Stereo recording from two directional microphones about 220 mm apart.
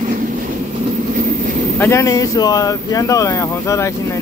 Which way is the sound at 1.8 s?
10° left (ahead or behind).